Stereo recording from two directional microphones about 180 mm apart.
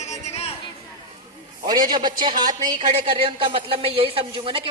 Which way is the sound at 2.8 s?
35° right (ahead or behind).